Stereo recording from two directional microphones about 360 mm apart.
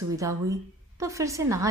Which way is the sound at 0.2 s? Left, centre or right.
Centre.